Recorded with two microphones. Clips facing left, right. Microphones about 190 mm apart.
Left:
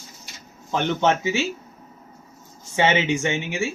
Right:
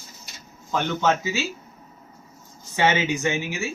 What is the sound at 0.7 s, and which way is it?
Speech, 20° left (ahead or behind).